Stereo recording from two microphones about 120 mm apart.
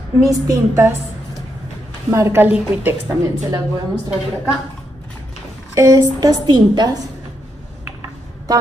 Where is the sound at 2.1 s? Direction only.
25° right (ahead or behind).